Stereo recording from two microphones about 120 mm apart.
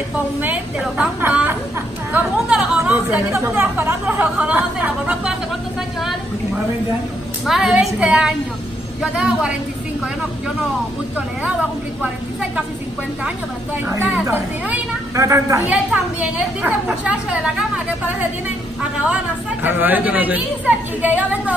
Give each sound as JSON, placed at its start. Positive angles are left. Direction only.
{"t": 0.4, "sound": "a woman's voice", "side_deg": -10}
{"t": 7.4, "sound": "a woman's voice", "side_deg": -5}
{"t": 12.0, "sound": "a woman's voice", "side_deg": -10}
{"t": 13.8, "sound": "a woman's voice", "side_deg": -20}
{"t": 15.6, "sound": "a woman's voice", "side_deg": -10}
{"t": 19.6, "sound": "a woman's voice", "side_deg": -15}